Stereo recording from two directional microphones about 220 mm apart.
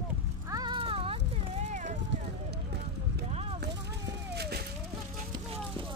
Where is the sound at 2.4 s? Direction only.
50° right (ahead or behind).